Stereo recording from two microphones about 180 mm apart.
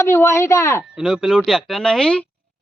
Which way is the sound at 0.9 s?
5° right (ahead or behind).